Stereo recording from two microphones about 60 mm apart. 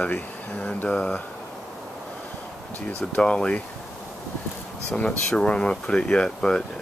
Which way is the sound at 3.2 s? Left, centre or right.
Centre.